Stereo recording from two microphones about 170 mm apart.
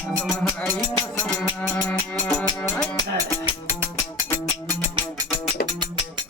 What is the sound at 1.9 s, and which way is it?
Music, 5° left (ahead or behind).